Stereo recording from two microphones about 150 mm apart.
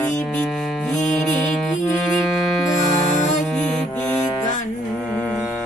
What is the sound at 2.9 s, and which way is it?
Music, 50° left (ahead or behind).